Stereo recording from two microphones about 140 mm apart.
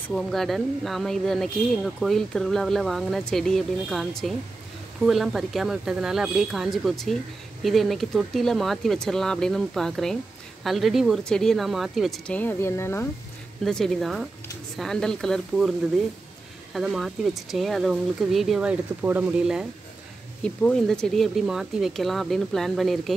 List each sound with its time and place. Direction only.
0.1 s speech: centre (ahead or behind)
12.3 s speech: 15° left (ahead or behind)
13.7 s speech: 5° left (ahead or behind)
16.7 s speech: centre (ahead or behind)
20.4 s speech: 5° left (ahead or behind)